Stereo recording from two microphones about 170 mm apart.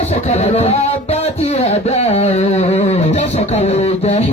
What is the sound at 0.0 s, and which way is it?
Music, 40° left (ahead or behind).